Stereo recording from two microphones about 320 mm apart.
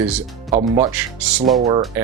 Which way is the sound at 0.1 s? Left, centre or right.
Centre.